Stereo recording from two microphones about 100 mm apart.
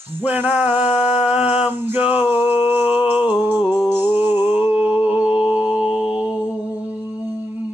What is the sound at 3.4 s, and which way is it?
Music, 20° right (ahead or behind).